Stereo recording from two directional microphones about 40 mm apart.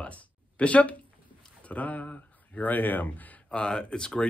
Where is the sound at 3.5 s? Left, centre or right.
Left.